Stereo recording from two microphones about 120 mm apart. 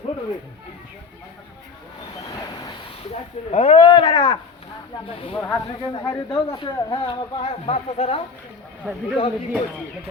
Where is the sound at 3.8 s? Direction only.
40° left (ahead or behind); by 8.2 s 60° left (ahead or behind).